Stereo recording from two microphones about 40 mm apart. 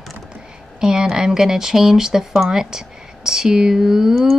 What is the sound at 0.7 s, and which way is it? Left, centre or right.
A woman's voice, centre.